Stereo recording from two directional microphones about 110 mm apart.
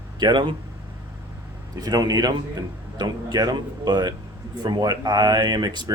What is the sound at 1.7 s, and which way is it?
Speech, 35° right (ahead or behind).